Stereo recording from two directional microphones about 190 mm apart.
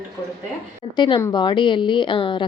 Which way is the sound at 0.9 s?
25° left (ahead or behind).